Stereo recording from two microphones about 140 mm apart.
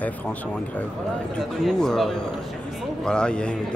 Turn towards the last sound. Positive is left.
turn(degrees=5)  # may be behind; listen again after turning